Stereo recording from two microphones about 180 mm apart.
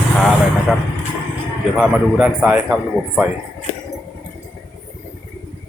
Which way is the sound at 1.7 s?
5° right (ahead or behind).